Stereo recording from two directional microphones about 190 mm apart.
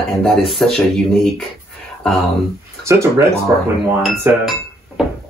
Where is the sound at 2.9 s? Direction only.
15° right (ahead or behind).